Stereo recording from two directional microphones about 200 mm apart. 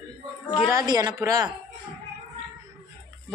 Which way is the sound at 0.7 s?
20° right (ahead or behind).